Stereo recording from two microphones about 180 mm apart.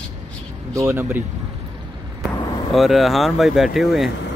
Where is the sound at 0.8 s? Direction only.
10° right (ahead or behind).